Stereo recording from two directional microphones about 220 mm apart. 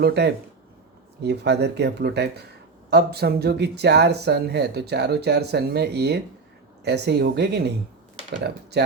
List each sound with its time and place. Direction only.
0.0 s speech: 50° right (ahead or behind)